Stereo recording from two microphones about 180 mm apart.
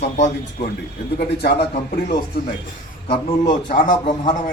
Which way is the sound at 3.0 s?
35° left (ahead or behind).